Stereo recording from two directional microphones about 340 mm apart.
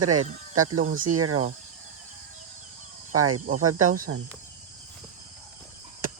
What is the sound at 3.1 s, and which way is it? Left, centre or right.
Speech, right.